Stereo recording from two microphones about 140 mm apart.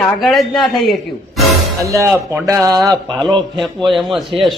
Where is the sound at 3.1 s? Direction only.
5° left (ahead or behind).